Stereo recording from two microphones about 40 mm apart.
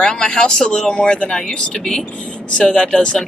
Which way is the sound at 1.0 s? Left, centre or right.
Left.